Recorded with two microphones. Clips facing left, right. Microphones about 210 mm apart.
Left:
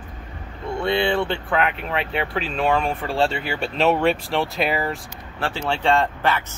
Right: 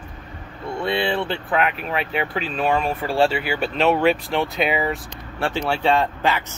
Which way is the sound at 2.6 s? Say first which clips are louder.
Even; 5° right (ahead or behind).